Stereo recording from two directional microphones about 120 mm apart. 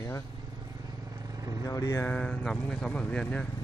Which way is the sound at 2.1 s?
10° left (ahead or behind).